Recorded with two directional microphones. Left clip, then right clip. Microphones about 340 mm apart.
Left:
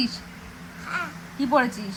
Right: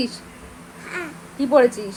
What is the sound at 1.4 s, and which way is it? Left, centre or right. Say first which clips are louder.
Speech: right 6 dB; centre.